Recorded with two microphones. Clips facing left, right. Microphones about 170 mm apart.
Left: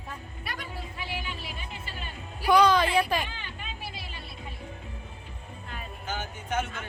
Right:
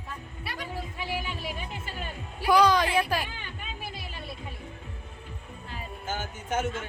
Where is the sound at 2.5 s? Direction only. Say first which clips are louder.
Left 1 dB; 10° right (ahead or behind).